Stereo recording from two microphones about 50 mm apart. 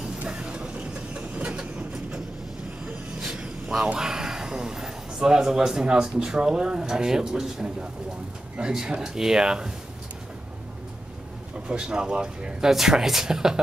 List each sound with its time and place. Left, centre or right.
0.0 s vehicle: centre
1.6 s train: centre
3.3 s speech: centre
11.6 s speech: centre